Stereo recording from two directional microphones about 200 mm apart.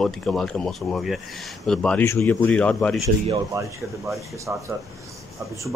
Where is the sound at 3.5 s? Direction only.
15° right (ahead or behind).